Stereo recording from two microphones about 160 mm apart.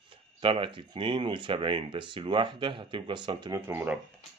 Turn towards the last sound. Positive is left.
turn(degrees=-15)  # may be behind; listen again after turning